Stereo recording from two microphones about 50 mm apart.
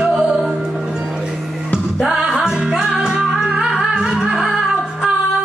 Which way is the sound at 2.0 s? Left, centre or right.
Centre.